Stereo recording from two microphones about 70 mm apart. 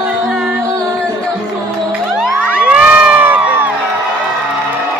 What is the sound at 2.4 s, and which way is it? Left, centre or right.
Crowd, centre.